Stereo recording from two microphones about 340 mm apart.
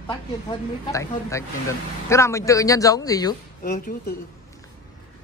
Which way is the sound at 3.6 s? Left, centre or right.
Left.